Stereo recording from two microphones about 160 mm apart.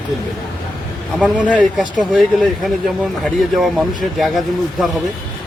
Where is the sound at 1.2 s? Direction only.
5° right (ahead or behind).